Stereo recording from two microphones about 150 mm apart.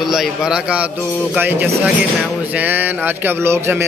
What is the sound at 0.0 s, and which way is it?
Speech, centre (ahead or behind).